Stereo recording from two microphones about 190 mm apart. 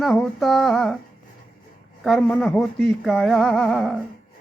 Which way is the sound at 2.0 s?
Centre (ahead or behind).